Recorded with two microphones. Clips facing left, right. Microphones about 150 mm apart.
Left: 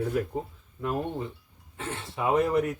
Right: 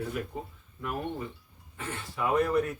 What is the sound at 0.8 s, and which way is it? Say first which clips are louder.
Speech: left 4 dB; 25° left (ahead or behind).